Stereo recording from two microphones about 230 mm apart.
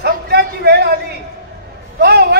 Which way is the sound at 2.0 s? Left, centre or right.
Right.